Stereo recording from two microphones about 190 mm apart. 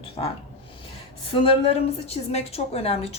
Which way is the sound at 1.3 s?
30° left (ahead or behind).